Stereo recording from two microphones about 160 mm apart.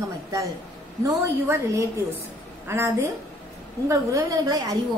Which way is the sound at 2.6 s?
15° right (ahead or behind).